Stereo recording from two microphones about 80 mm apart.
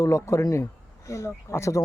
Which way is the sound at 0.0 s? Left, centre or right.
Left.